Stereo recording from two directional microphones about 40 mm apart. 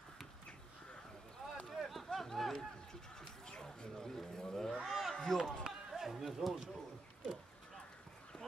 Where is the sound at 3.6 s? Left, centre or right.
Centre.